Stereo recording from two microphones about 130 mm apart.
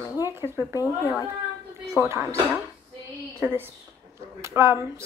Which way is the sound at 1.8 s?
20° right (ahead or behind).